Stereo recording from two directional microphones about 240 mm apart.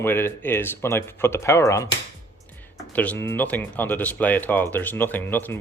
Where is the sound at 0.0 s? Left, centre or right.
Centre.